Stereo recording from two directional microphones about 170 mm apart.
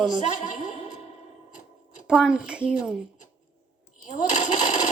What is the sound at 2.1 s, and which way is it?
Speech, 5° right (ahead or behind).